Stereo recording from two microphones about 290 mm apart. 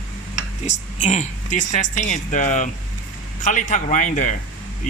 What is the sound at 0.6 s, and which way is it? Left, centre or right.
Speech, left.